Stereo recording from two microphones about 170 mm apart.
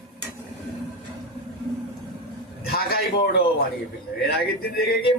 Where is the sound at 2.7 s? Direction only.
65° left (ahead or behind).